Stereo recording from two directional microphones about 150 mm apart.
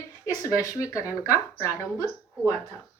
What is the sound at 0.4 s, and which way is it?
Speech, 20° left (ahead or behind).